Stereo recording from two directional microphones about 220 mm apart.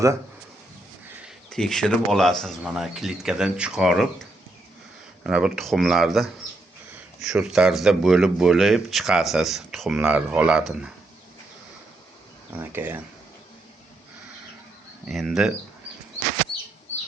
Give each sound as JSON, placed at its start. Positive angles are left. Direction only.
{"t": 1.5, "sound": "speech", "side_deg": 0}
{"t": 12.5, "sound": "speech", "side_deg": -10}
{"t": 15.0, "sound": "speech", "side_deg": 0}